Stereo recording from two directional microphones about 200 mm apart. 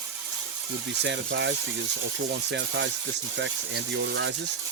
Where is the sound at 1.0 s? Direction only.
60° right (ahead or behind).